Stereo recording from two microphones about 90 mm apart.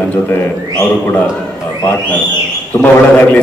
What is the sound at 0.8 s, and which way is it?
A man's voice, 20° left (ahead or behind).